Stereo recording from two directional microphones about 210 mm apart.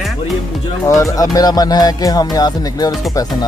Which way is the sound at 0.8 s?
15° left (ahead or behind).